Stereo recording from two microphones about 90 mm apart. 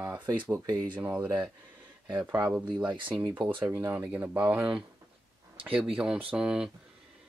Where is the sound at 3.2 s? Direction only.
60° right (ahead or behind).